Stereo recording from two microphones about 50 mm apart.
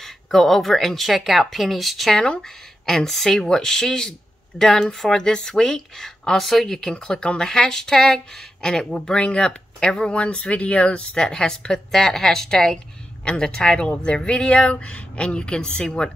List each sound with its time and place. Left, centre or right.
0.0 s speech: centre